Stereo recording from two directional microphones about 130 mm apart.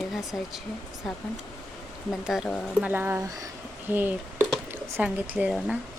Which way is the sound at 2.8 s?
15° right (ahead or behind).